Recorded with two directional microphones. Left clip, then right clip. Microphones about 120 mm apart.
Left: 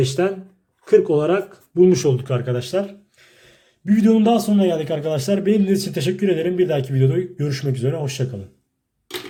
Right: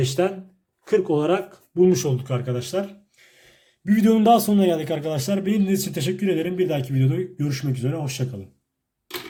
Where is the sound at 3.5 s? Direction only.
5° left (ahead or behind).